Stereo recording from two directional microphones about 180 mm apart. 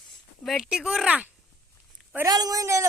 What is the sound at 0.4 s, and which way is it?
Speech, centre (ahead or behind).